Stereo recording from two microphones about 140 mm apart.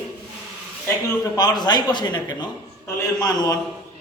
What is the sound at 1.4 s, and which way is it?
A man's voice, 30° left (ahead or behind).